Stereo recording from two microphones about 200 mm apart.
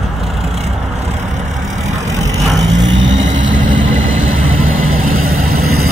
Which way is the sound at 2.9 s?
70° right (ahead or behind).